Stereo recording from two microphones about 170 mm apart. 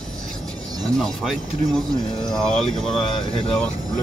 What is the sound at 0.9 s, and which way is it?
Speech, 5° left (ahead or behind).